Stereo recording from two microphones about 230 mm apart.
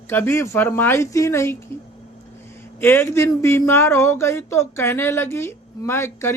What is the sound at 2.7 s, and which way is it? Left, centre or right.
Speech, centre.